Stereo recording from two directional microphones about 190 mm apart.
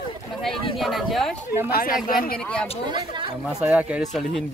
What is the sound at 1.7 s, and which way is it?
Speech, 45° left (ahead or behind).